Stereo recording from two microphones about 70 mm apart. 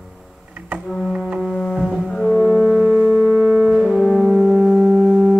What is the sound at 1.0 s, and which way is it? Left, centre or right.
Music, centre.